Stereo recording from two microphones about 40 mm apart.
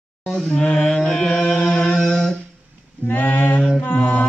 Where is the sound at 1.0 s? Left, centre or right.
Centre.